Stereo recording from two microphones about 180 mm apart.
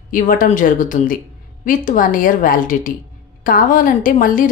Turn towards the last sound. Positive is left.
turn(degrees=50)  # may be behind; listen again after turning